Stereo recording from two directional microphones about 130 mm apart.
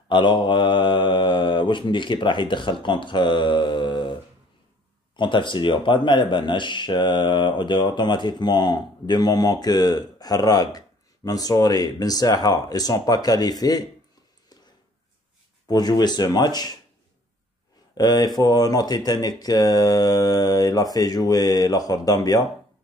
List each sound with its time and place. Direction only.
0.1 s speech: 35° left (ahead or behind)
15.7 s speech: 30° left (ahead or behind)
17.9 s speech: 30° left (ahead or behind)